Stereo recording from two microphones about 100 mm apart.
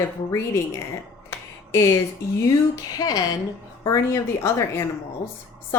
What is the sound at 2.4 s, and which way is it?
Speech, 40° left (ahead or behind).